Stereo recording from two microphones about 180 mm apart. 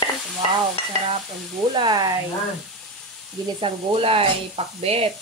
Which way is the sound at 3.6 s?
30° right (ahead or behind).